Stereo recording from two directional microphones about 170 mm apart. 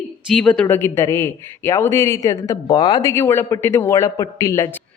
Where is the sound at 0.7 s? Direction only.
15° left (ahead or behind).